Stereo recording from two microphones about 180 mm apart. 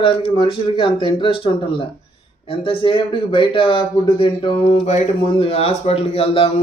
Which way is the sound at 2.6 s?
30° left (ahead or behind).